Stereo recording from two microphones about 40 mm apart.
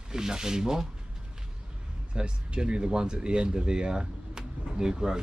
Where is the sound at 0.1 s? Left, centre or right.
Centre.